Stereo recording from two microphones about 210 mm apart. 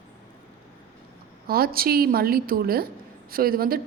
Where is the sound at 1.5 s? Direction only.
45° right (ahead or behind).